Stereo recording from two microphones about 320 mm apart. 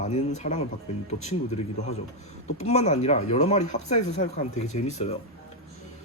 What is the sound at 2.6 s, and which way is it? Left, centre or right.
Speech, left.